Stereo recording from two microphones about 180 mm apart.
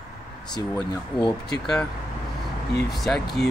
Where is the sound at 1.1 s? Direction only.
25° left (ahead or behind).